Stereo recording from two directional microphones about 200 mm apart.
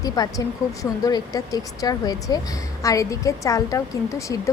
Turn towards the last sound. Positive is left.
turn(degrees=15)  # may be behind; listen again after turning